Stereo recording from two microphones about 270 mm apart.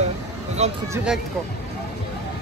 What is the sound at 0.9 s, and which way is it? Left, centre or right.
Speech, centre.